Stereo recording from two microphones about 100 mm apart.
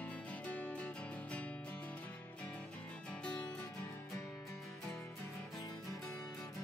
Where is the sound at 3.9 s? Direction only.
30° left (ahead or behind).